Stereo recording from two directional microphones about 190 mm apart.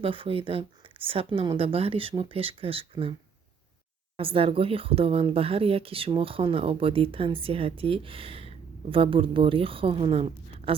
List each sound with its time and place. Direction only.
0.0 s speech: 30° right (ahead or behind)
4.2 s speech: 30° right (ahead or behind)